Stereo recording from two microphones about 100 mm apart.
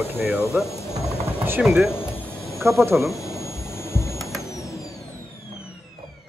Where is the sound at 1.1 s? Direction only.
25° right (ahead or behind).